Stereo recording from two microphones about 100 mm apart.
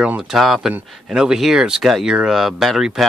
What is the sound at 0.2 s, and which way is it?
Speech, centre (ahead or behind).